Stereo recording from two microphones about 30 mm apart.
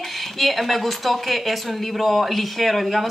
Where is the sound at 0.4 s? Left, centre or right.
Centre.